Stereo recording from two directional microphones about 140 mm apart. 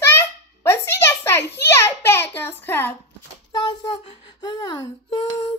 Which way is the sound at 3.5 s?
30° left (ahead or behind).